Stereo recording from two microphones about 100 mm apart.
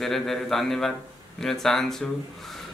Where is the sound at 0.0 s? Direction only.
5° left (ahead or behind).